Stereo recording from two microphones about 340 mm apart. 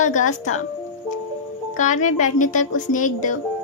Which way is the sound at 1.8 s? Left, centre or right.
Left.